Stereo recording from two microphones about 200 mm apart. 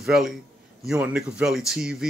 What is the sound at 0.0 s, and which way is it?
A man's voice, centre (ahead or behind).